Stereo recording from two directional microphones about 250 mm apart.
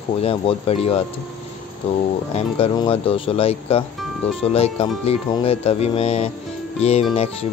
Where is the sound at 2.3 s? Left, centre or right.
Left.